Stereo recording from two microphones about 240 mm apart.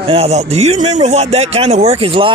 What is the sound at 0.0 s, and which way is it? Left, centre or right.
A man's voice, right.